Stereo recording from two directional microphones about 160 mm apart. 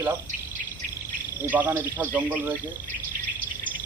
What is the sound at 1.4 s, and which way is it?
Speech, 15° right (ahead or behind).